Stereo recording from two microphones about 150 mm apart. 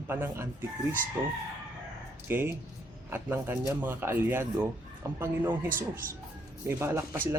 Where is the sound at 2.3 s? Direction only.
15° right (ahead or behind).